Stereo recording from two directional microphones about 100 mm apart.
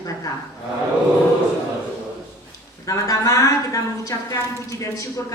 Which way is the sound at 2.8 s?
35° left (ahead or behind).